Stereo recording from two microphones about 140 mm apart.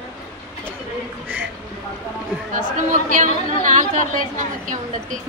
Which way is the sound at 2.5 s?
70° right (ahead or behind).